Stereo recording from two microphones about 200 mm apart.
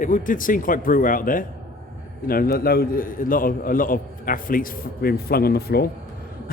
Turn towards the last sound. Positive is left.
turn(degrees=50)  # may be behind; listen again after turning